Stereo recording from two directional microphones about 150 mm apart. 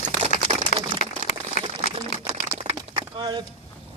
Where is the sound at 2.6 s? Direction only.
45° right (ahead or behind).